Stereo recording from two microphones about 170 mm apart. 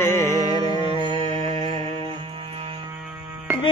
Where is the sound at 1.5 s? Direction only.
25° left (ahead or behind).